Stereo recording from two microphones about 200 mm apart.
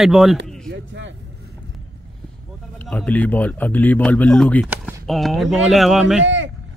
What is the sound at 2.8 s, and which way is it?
Speech, 5° left (ahead or behind).